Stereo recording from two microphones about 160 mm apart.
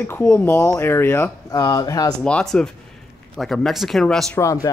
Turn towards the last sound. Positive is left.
turn(degrees=20)  # may be behind; listen again after turning